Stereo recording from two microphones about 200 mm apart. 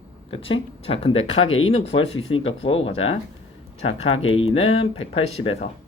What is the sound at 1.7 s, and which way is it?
Speech, 30° left (ahead or behind).